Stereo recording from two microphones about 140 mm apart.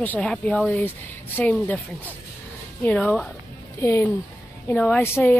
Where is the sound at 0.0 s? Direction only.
10° left (ahead or behind).